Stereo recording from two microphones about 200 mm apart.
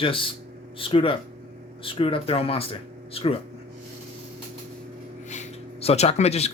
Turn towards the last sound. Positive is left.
turn(degrees=30)  # may be behind; listen again after turning